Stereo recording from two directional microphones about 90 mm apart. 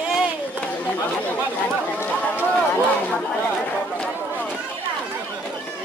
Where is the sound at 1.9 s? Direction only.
20° left (ahead or behind).